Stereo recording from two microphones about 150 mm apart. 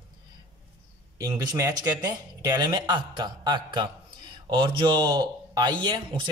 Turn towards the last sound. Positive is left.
turn(degrees=-30)  # may be behind; listen again after turning